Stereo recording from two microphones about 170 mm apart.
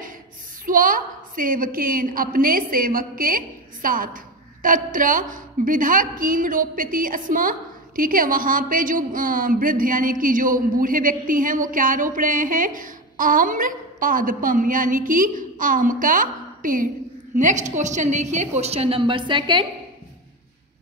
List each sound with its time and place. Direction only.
0.7 s a woman's voice: 55° right (ahead or behind); by 19.6 s 30° right (ahead or behind)